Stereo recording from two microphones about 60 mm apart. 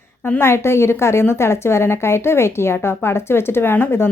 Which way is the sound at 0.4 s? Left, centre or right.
Left.